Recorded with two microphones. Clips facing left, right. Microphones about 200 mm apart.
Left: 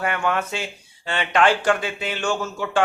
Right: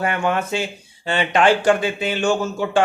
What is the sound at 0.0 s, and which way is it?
A man's voice, 25° right (ahead or behind).